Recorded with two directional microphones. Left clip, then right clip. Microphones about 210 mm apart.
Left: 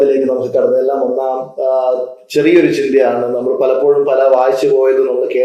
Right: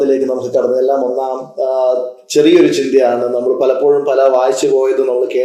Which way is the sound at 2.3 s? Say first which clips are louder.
Right 1 dB; 35° right (ahead or behind).